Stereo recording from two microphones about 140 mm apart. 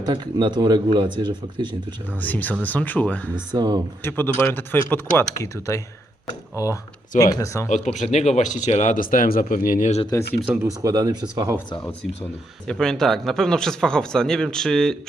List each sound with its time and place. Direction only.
0.0 s speech: 30° right (ahead or behind)
2.2 s speech: 10° left (ahead or behind)
3.5 s speech: 30° right (ahead or behind)
4.0 s speech: 15° left (ahead or behind)
7.2 s speech: 25° left (ahead or behind)
7.7 s speech: 55° left (ahead or behind); by 9.9 s 80° left
10.4 s speech: 10° right (ahead or behind)
10.8 s speech: 25° right (ahead or behind)
11.9 s speech: 15° left (ahead or behind)
12.7 s speech: 5° left (ahead or behind)